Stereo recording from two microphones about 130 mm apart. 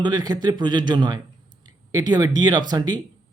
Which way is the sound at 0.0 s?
30° right (ahead or behind).